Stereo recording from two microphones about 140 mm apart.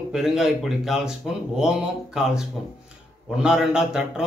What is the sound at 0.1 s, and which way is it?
Speech, 5° right (ahead or behind).